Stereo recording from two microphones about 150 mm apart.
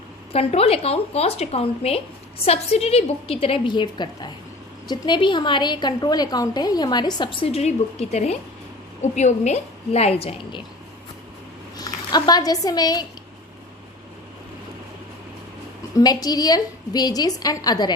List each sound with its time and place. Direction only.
0.3 s a woman's voice: 40° left (ahead or behind)
11.8 s speech: 25° left (ahead or behind)
16.0 s a woman's voice: 25° left (ahead or behind)